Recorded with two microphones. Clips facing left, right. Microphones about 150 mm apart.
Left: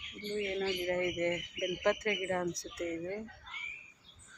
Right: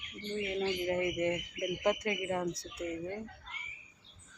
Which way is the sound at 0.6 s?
20° right (ahead or behind).